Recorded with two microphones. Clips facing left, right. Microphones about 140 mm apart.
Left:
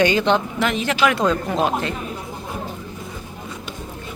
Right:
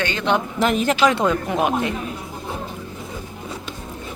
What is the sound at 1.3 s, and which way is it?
Speech, 15° right (ahead or behind).